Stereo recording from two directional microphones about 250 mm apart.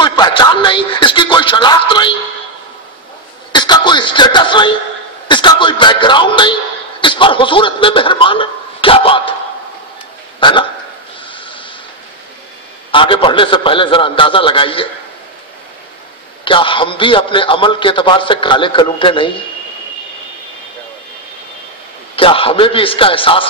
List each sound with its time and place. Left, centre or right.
0.0 s a sound: centre
3.5 s music: centre
5.3 s a man's voice: centre
10.4 s a man's voice: centre
11.3 s snort: centre
12.9 s a man's voice: left
16.4 s a man's voice: centre
22.1 s a man's voice: left